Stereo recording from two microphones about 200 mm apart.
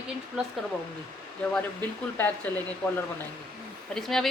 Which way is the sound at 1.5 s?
10° left (ahead or behind).